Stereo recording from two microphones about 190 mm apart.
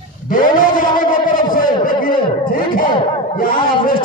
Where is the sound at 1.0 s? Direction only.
45° left (ahead or behind).